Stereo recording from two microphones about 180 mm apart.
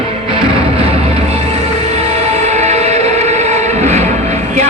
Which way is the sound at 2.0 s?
35° right (ahead or behind).